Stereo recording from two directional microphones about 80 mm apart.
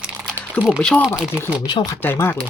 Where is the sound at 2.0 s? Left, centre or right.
Left.